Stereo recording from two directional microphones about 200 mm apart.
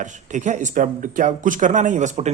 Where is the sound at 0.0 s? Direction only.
40° right (ahead or behind).